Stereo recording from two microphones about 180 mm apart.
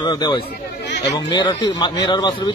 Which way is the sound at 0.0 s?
25° left (ahead or behind).